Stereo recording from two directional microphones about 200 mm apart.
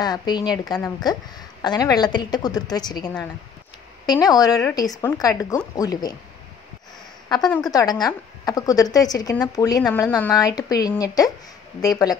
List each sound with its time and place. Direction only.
0.0 s a woman's voice: 20° left (ahead or behind)
7.2 s a woman's voice: 20° left (ahead or behind)